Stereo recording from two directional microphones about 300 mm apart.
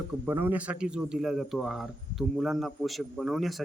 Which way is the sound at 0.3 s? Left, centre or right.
Centre.